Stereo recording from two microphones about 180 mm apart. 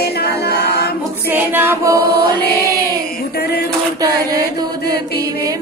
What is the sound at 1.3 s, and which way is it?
Female singing, 10° right (ahead or behind).